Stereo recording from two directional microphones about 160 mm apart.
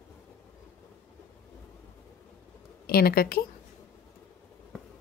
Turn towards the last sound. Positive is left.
turn(degrees=70)  # may be behind; listen again after turning